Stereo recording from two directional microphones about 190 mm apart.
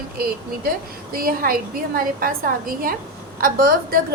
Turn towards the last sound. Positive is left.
turn(degrees=-50)  # may be behind; listen again after turning